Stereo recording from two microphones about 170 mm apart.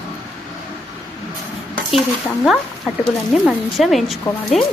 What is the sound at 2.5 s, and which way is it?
Speech, centre (ahead or behind).